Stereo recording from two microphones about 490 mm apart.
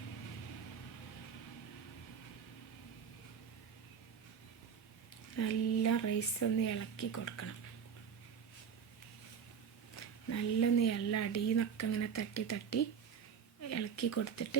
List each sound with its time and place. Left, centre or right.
5.4 s speech: left
9.9 s speech: left